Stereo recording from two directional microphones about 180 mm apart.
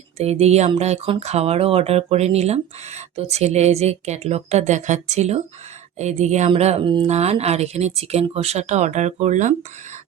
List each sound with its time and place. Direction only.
0.2 s speech: 35° right (ahead or behind)